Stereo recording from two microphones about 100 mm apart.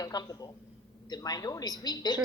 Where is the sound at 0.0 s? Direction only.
40° left (ahead or behind).